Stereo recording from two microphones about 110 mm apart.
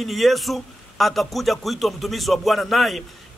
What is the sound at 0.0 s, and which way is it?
A man's voice, centre (ahead or behind).